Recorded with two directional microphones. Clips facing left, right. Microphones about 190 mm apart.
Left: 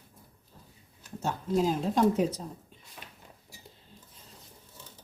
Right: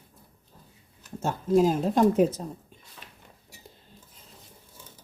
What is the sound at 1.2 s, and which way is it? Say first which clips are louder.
Speech: right 6 dB; 50° right (ahead or behind).